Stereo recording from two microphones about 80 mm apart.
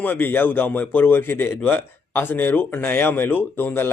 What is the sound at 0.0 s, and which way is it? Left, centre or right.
A man's voice, left.